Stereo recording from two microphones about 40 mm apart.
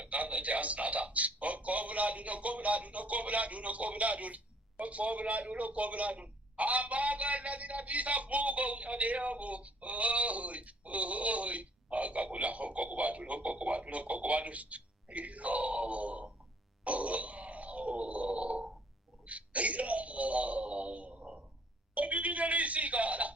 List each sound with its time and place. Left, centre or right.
0.0 s a man's voice: right
16.8 s grunt: right
19.2 s a man's voice: right